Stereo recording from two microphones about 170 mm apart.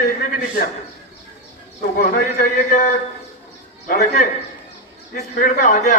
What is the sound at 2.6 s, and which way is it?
Speech, 50° left (ahead or behind).